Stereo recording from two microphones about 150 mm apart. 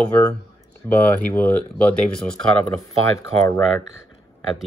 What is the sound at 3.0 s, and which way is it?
Speech, 20° left (ahead or behind).